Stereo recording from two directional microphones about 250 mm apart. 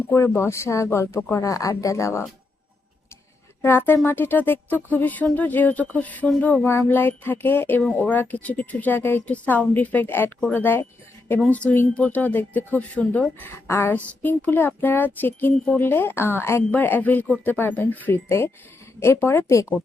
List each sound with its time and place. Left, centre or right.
0.1 s speech: centre
3.6 s speech: centre